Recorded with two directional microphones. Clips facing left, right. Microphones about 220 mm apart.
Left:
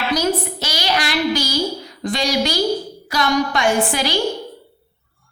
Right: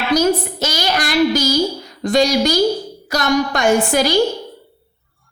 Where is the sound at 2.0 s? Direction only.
45° right (ahead or behind).